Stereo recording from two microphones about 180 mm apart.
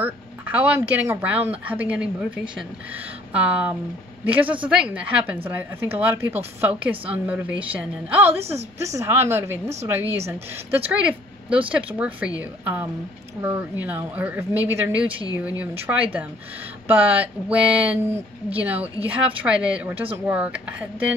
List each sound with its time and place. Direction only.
0.0 s a woman's voice: 10° right (ahead or behind)
8.4 s a woman's voice: 35° right (ahead or behind)
8.8 s a woman's voice: 15° right (ahead or behind)